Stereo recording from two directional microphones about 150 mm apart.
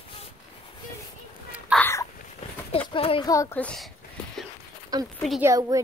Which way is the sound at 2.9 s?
35° left (ahead or behind).